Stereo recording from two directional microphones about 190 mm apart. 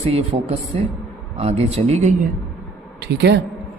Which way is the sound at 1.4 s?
35° right (ahead or behind).